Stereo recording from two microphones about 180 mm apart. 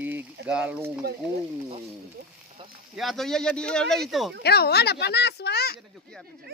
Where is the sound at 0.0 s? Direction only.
10° right (ahead or behind).